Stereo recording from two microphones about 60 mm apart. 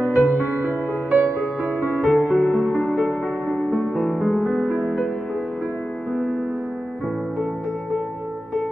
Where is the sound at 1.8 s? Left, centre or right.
Left.